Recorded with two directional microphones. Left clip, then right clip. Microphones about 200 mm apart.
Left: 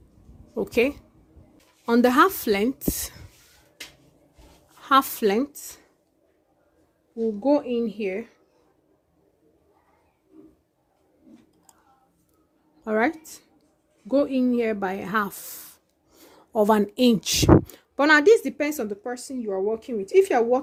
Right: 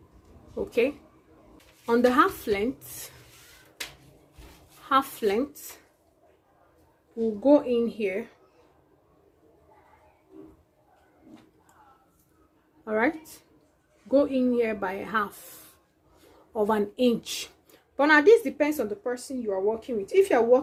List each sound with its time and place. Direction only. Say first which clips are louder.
0.5 s a woman's voice: left 3 dB; 55° left (ahead or behind)
4.8 s a woman's voice: left 4 dB; 55° left (ahead or behind)
7.4 s a woman's voice: right 2 dB; 35° left (ahead or behind)
12.8 s speech: left 2 dB; 50° left (ahead or behind)
16.5 s speech: left 5 dB; 55° left (ahead or behind)